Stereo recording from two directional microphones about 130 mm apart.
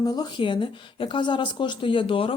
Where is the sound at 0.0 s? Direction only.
30° left (ahead or behind).